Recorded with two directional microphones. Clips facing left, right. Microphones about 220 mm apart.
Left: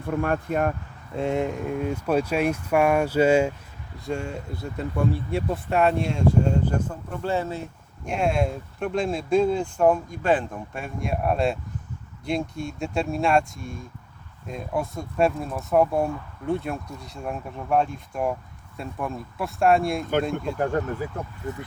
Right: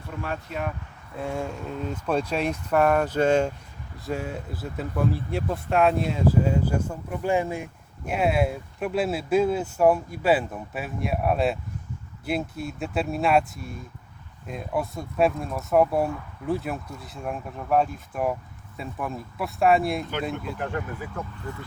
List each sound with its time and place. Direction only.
0.0 s speech: 50° left (ahead or behind)
1.1 s speech: 25° left (ahead or behind)
3.9 s speech: centre (ahead or behind)
20.6 s speech: 40° left (ahead or behind)